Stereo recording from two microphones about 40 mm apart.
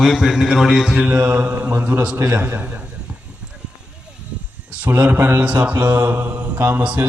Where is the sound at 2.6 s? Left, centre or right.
Right.